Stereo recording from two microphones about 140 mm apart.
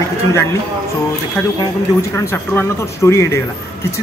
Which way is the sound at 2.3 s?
20° left (ahead or behind).